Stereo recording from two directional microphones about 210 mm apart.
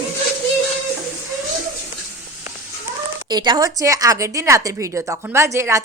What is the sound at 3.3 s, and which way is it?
A woman's voice, 20° right (ahead or behind).